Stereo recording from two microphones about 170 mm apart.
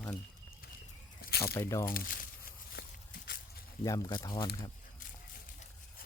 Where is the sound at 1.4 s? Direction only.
15° left (ahead or behind).